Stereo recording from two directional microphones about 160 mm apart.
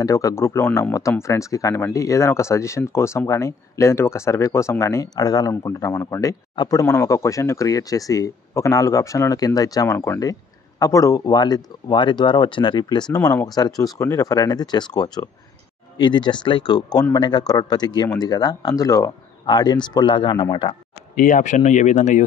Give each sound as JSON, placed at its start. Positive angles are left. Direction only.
{"t": 0.0, "sound": "speech", "side_deg": 20}
{"t": 21.1, "sound": "speech", "side_deg": 60}